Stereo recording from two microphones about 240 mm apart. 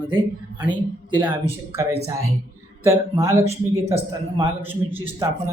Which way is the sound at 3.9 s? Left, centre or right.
Right.